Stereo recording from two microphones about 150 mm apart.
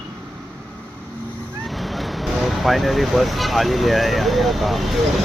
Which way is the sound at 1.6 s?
Centre (ahead or behind).